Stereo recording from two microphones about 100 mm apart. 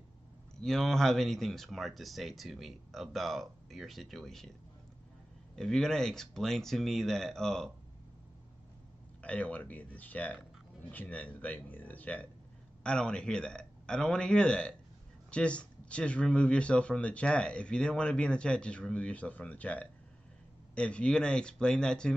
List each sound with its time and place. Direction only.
0.6 s speech: 5° left (ahead or behind)
5.6 s speech: 5° left (ahead or behind)
9.2 s speech: 15° left (ahead or behind)